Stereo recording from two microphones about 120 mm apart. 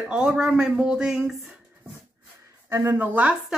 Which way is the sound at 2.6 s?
20° right (ahead or behind).